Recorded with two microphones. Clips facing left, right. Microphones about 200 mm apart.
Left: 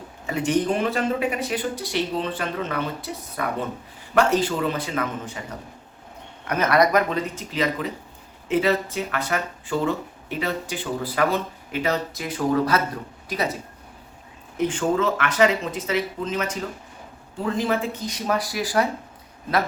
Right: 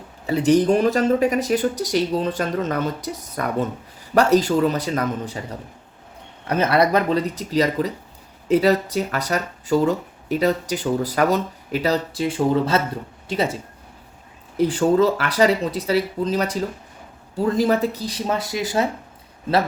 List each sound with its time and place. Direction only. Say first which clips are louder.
0.3 s speech: right 6 dB; 35° right (ahead or behind)
6.5 s speech: right 1 dB; 30° right (ahead or behind)
14.6 s speech: right 5 dB; 35° right (ahead or behind)